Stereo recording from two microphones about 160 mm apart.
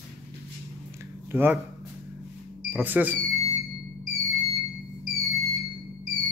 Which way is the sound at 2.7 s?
10° right (ahead or behind).